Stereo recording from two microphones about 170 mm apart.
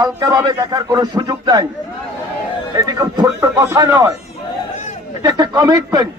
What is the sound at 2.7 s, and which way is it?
A man's voice, 25° right (ahead or behind).